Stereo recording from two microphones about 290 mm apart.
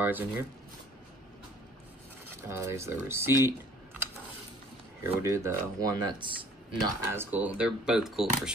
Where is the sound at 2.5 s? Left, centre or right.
Centre.